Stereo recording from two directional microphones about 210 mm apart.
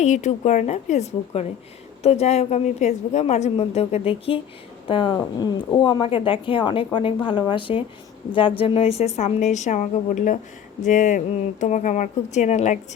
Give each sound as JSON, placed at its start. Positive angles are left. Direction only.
{"t": 0.0, "sound": "a woman's voice", "side_deg": 35}